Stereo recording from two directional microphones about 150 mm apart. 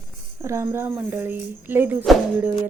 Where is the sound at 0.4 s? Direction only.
20° right (ahead or behind).